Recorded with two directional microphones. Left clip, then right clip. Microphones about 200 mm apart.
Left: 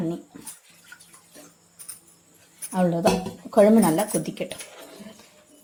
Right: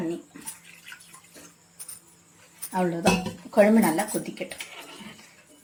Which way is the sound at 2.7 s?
30° left (ahead or behind).